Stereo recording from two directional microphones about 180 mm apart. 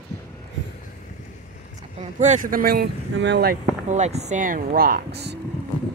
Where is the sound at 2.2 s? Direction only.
45° right (ahead or behind); by 3.6 s 70° right (ahead or behind).